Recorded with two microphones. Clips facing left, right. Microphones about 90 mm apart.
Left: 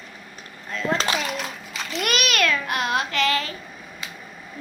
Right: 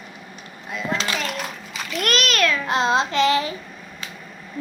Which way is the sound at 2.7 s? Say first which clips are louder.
Right 4 dB; 25° right (ahead or behind).